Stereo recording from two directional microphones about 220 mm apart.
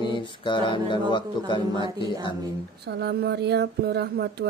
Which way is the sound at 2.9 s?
45° right (ahead or behind).